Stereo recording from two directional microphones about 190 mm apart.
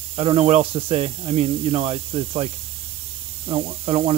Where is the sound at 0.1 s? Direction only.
30° right (ahead or behind).